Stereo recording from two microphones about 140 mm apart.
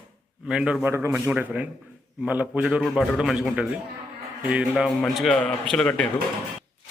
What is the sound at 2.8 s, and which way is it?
A man's voice, centre (ahead or behind).